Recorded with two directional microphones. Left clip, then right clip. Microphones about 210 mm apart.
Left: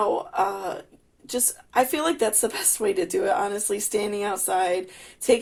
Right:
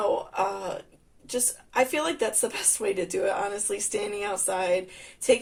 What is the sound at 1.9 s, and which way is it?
Speech, 45° left (ahead or behind).